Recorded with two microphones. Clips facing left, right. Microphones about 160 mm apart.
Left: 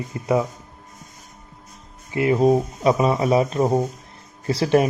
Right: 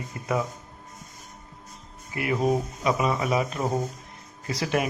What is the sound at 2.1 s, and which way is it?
Speech, 30° left (ahead or behind).